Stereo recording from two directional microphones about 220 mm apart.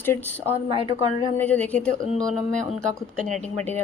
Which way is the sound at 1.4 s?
5° left (ahead or behind).